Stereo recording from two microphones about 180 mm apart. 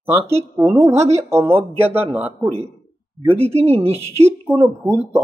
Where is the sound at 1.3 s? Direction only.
15° right (ahead or behind).